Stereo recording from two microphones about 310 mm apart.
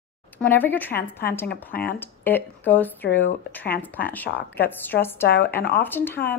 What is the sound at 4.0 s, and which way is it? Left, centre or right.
Speech, left.